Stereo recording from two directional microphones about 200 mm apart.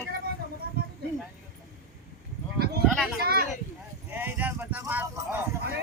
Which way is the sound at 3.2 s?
50° right (ahead or behind).